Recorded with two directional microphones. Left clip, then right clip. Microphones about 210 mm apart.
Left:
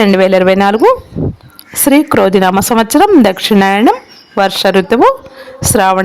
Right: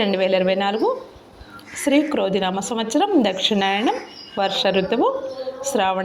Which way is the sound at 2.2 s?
40° left (ahead or behind).